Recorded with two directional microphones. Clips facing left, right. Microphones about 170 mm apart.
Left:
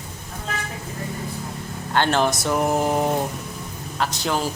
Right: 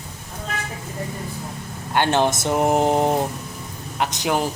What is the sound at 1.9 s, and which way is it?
A man's voice, 15° right (ahead or behind).